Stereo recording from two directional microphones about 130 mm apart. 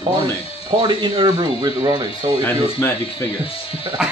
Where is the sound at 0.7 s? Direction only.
40° right (ahead or behind).